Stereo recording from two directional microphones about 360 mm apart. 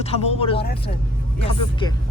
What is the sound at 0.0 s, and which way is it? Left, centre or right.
Speech, centre.